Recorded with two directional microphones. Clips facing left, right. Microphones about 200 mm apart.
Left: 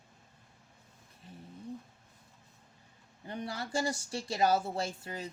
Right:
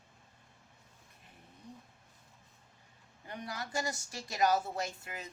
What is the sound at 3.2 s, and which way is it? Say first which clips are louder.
Speech: left 4 dB; 30° left (ahead or behind).